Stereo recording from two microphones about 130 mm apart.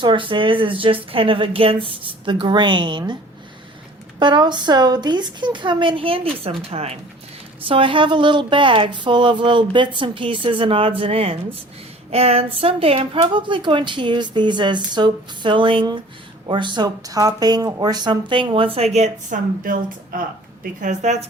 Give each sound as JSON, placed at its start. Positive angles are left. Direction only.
{"t": 0.0, "sound": "speech", "side_deg": -40}
{"t": 4.2, "sound": "speech", "side_deg": -35}
{"t": 7.6, "sound": "speech", "side_deg": -40}
{"t": 18.9, "sound": "speech", "side_deg": -70}
{"t": 20.8, "sound": "a woman's voice", "side_deg": -65}